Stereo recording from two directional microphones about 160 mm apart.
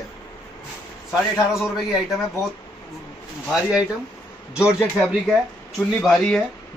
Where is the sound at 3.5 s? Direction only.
5° right (ahead or behind).